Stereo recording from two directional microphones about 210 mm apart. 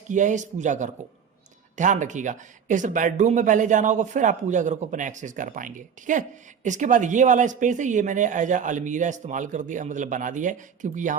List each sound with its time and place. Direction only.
0.1 s speech: 35° right (ahead or behind)